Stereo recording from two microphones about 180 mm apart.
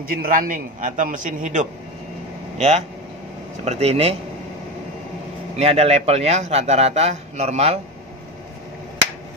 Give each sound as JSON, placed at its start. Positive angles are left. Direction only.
{"t": 0.0, "sound": "a man's voice", "side_deg": -55}
{"t": 5.6, "sound": "a man's voice", "side_deg": -35}